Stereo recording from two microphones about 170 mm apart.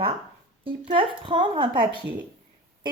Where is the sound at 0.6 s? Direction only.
30° right (ahead or behind).